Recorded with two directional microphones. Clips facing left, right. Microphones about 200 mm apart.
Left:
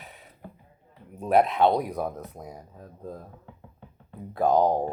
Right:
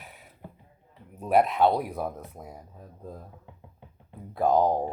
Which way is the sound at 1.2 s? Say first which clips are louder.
Left 1 dB; 5° right (ahead or behind).